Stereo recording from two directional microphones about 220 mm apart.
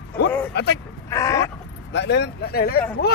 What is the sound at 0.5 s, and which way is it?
Vehicle, 50° left (ahead or behind).